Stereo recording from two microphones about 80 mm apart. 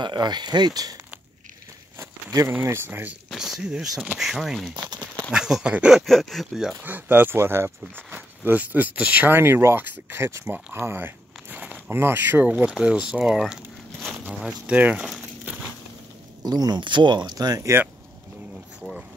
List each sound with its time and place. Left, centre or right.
0.0 s speech: right
2.0 s a sound: right
2.6 s speech: right
3.3 s speech: centre
4.7 s a sound: right
5.3 s speech: centre
6.0 s speech: centre
6.8 s speech: right; by 13.6 s centre
14.7 s speech: centre
16.4 s speech: right
16.8 s speech: right